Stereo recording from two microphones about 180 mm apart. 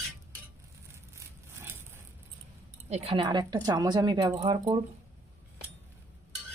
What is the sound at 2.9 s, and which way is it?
Speech, 35° right (ahead or behind).